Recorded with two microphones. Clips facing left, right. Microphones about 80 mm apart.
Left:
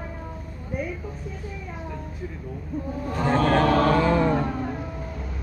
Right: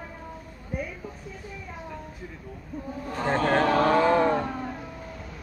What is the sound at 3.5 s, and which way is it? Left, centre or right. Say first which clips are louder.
Chant: left 2 dB; right.